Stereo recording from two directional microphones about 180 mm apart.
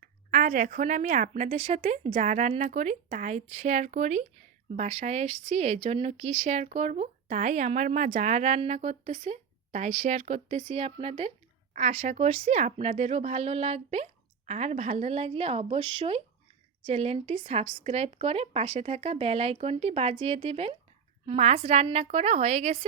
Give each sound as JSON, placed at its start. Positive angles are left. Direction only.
{"t": 0.0, "sound": "speech", "side_deg": -45}